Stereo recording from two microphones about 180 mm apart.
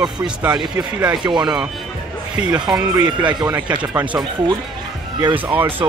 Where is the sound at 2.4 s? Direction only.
35° left (ahead or behind).